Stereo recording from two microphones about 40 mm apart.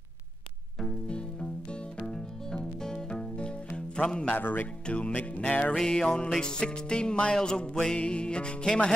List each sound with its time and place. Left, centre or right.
0.7 s music: left
4.3 s speech: left
4.8 s music: left
5.1 s music: left
5.9 s music: left